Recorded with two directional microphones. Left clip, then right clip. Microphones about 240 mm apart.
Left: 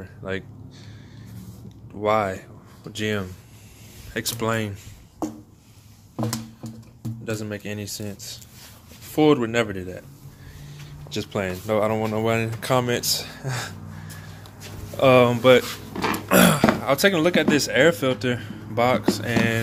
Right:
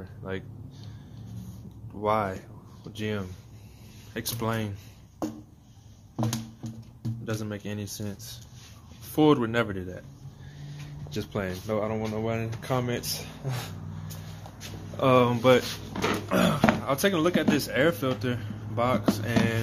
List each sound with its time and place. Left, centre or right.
0.0 s speech: centre
2.0 s speech: centre
6.1 s music: centre
9.1 s speech: centre
11.1 s speech: centre
15.0 s speech: centre
15.9 s a sound: centre
16.3 s a sound: left
16.8 s speech: centre